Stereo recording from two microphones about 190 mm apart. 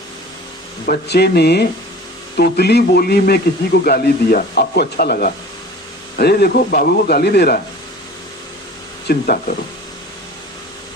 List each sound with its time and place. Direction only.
0.9 s a man's voice: 60° left (ahead or behind)
9.0 s speech: 50° left (ahead or behind)